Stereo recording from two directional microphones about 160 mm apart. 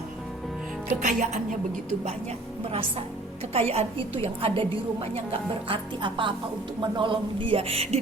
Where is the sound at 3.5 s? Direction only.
40° right (ahead or behind).